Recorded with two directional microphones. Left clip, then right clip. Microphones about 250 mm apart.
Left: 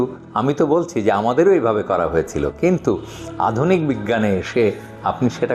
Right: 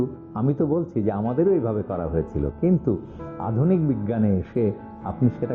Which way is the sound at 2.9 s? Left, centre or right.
Left.